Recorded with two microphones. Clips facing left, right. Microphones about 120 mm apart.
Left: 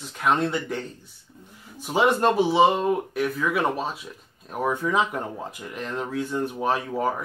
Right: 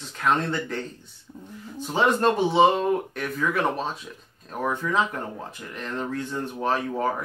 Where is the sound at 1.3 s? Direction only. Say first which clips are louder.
Right 7 dB; 25° right (ahead or behind).